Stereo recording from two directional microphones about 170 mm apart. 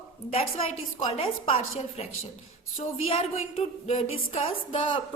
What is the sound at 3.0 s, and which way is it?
A woman's voice, 35° left (ahead or behind).